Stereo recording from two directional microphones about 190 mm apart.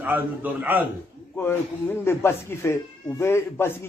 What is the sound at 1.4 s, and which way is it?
Speech, 10° left (ahead or behind).